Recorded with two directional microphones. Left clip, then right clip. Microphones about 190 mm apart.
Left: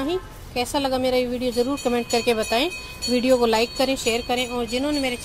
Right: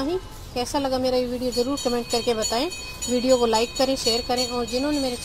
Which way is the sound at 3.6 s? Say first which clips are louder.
Left 1 dB; 10° left (ahead or behind).